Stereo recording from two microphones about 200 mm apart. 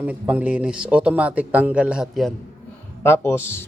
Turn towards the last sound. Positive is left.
turn(degrees=10)  # may be behind; listen again after turning